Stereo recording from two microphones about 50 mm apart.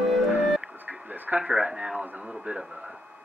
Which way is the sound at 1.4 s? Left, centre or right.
Centre.